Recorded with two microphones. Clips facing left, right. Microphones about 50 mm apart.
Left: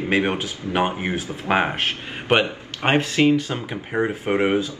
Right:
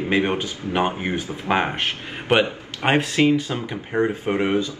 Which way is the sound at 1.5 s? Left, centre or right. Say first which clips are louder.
Left 1 dB; centre.